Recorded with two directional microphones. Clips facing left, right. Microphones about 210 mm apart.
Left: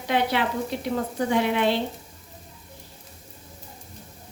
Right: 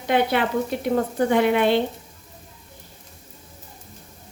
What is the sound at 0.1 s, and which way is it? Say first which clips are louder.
A woman's voice: right 4 dB; 55° right (ahead or behind).